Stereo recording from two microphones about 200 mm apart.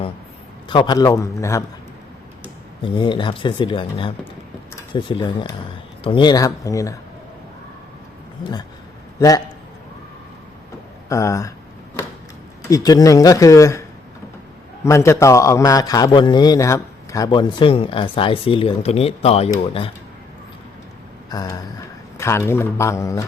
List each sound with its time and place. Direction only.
0.7 s speech: 20° left (ahead or behind)
2.8 s a man's voice: 25° left (ahead or behind)
8.4 s speech: 45° left (ahead or behind)
11.1 s speech: 15° left (ahead or behind)
12.7 s speech: 20° left (ahead or behind)
14.8 s a man's voice: 15° left (ahead or behind)
21.2 s a man's voice: 20° left (ahead or behind)